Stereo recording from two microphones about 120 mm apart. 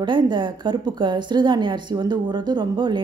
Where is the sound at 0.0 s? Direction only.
40° right (ahead or behind).